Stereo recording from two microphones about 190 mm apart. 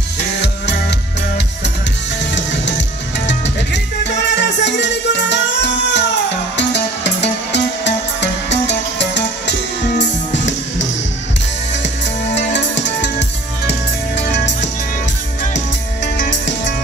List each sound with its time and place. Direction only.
0.4 s music: 65° left (ahead or behind)
3.3 s music: 70° left (ahead or behind)
12.4 s music: 65° left (ahead or behind)
16.2 s music: 70° left (ahead or behind)